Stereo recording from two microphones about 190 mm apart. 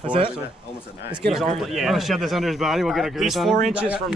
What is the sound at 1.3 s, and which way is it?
Speech, centre (ahead or behind).